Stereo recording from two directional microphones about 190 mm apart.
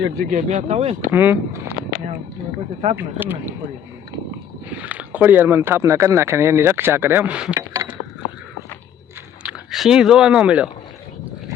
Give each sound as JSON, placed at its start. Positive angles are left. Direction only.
{"t": 0.3, "sound": "speech", "side_deg": -40}
{"t": 1.1, "sound": "speech", "side_deg": -10}
{"t": 2.9, "sound": "speech", "side_deg": -10}
{"t": 4.7, "sound": "speech", "side_deg": -10}
{"t": 7.5, "sound": "a sound", "side_deg": -15}
{"t": 9.4, "sound": "speech", "side_deg": -5}